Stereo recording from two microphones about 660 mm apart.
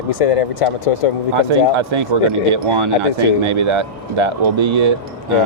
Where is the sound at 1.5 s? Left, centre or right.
Right.